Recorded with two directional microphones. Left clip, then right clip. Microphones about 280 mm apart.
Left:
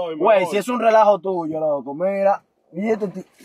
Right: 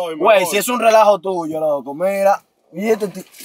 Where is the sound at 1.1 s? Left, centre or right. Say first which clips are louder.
Right 2 dB; left.